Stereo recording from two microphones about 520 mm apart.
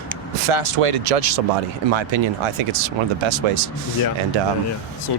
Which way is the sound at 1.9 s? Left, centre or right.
Right.